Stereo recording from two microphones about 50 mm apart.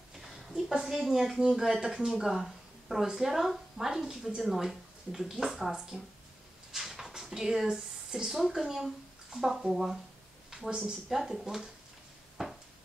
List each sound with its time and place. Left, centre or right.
0.2 s speech: centre
1.8 s a woman's voice: centre
2.0 s a woman's voice: centre